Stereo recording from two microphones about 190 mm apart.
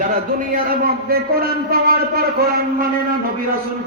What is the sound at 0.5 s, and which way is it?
A man's voice, 55° right (ahead or behind).